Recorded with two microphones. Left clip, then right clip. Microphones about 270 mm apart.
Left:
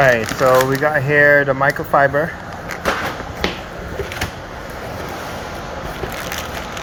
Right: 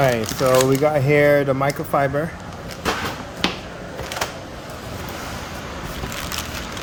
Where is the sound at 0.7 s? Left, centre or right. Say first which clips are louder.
Left 1 dB; right.